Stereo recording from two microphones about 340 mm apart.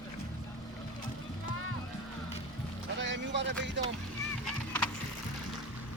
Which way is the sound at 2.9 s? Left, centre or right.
Right.